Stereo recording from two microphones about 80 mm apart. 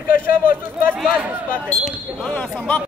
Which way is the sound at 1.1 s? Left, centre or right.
Right.